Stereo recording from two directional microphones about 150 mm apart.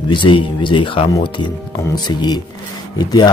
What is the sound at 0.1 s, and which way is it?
Speech, 35° left (ahead or behind).